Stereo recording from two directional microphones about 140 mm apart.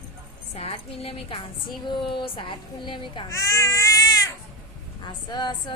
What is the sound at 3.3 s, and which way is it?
A woman's voice, 25° left (ahead or behind).